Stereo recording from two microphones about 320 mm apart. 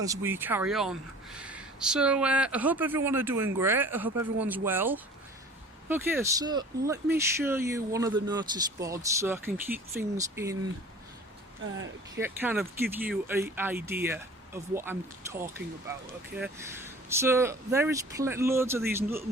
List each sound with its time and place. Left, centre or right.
0.0 s speech: centre
11.6 s speech: right
12.2 s speech: centre